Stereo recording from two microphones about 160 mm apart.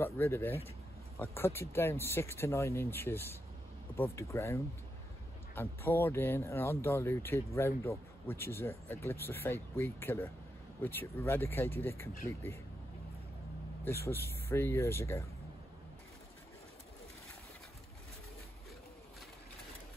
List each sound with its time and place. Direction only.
0.0 s speech: 15° left (ahead or behind)
13.8 s speech: 15° left (ahead or behind)